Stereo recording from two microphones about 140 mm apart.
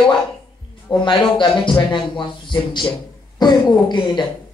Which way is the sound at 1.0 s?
35° left (ahead or behind).